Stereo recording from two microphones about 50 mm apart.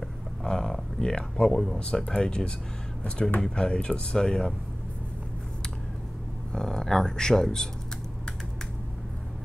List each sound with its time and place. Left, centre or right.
0.4 s speech: centre
6.5 s speech: centre